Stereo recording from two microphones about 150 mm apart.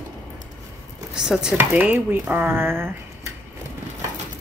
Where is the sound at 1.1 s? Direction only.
5° right (ahead or behind).